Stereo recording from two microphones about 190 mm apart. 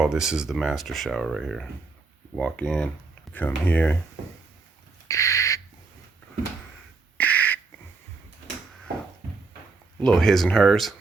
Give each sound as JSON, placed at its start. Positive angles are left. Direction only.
{"t": 0.0, "sound": "speech", "side_deg": -5}
{"t": 5.0, "sound": "owl", "side_deg": 15}
{"t": 7.2, "sound": "a sound", "side_deg": 10}
{"t": 10.0, "sound": "speech", "side_deg": 0}